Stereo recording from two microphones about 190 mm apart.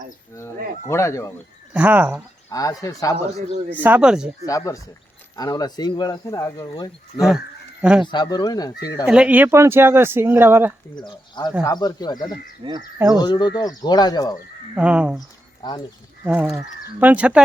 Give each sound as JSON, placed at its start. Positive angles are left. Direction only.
{"t": 0.9, "sound": "speech", "side_deg": 15}
{"t": 1.7, "sound": "speech", "side_deg": -10}
{"t": 2.5, "sound": "speech", "side_deg": 20}
{"t": 3.7, "sound": "speech", "side_deg": -10}
{"t": 4.4, "sound": "speech", "side_deg": 15}
{"t": 7.2, "sound": "speech", "side_deg": 0}
{"t": 8.0, "sound": "speech", "side_deg": 25}
{"t": 9.0, "sound": "speech", "side_deg": -5}
{"t": 10.9, "sound": "speech", "side_deg": 25}
{"t": 12.6, "sound": "speech", "side_deg": -20}
{"t": 13.1, "sound": "speech", "side_deg": 20}
{"t": 14.8, "sound": "speech", "side_deg": -5}
{"t": 15.6, "sound": "speech", "side_deg": 20}
{"t": 16.2, "sound": "speech", "side_deg": -5}